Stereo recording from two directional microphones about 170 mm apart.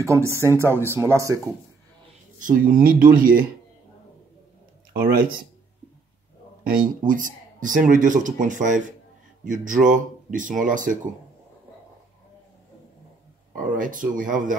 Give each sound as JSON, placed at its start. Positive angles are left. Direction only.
{"t": 0.0, "sound": "speech", "side_deg": -15}
{"t": 2.4, "sound": "speech", "side_deg": -55}
{"t": 4.9, "sound": "speech", "side_deg": -60}
{"t": 6.6, "sound": "speech", "side_deg": -55}
{"t": 13.6, "sound": "speech", "side_deg": -50}